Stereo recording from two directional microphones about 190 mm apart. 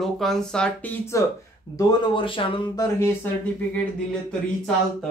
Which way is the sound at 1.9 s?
25° left (ahead or behind).